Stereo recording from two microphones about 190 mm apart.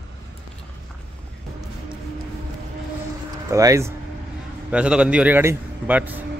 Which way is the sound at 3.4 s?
15° right (ahead or behind).